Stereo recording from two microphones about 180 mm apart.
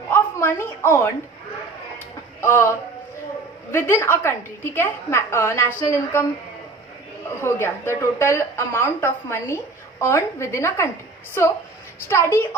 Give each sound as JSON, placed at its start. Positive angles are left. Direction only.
{"t": 0.1, "sound": "a woman's voice", "side_deg": 10}
{"t": 2.4, "sound": "a woman's voice", "side_deg": 15}
{"t": 7.4, "sound": "a woman's voice", "side_deg": 15}
{"t": 12.0, "sound": "a woman's voice", "side_deg": 15}